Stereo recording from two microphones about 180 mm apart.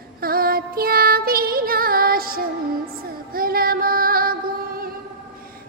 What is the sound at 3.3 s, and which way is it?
Female singing, 55° right (ahead or behind).